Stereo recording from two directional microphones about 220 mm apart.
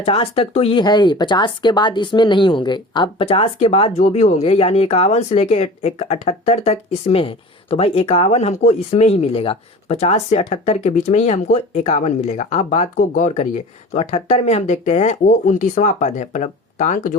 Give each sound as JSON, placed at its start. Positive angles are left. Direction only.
{"t": 0.0, "sound": "speech", "side_deg": 25}